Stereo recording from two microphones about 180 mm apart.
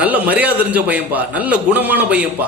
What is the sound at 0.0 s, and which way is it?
A man's voice, 10° right (ahead or behind).